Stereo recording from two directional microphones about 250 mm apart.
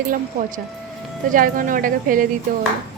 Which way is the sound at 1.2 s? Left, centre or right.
Right.